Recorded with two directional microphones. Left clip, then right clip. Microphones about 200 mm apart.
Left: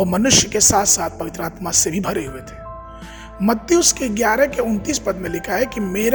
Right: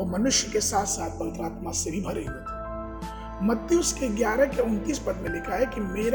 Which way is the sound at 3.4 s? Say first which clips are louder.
Left 8 dB; 50° left (ahead or behind).